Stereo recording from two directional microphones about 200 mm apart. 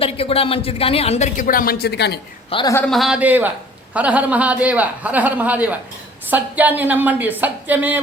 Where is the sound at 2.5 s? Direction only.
25° left (ahead or behind).